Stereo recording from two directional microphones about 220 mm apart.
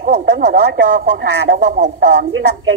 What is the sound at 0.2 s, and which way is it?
Speech, 45° right (ahead or behind).